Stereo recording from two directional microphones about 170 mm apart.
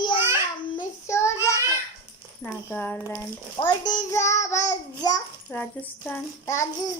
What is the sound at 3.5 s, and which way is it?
A child's voice, 25° left (ahead or behind).